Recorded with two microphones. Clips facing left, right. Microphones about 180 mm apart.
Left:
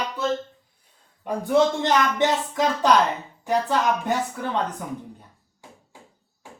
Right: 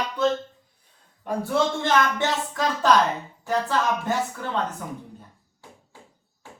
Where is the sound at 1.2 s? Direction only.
15° left (ahead or behind).